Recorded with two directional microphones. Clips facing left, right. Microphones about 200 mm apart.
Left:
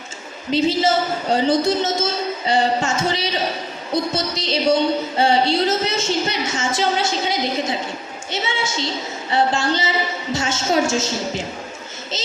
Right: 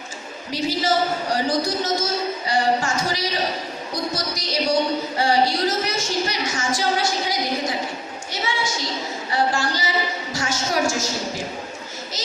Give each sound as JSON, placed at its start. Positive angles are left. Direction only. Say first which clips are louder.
{"t": 0.5, "sound": "a woman's voice", "louder": "left 4 dB", "side_deg": 25}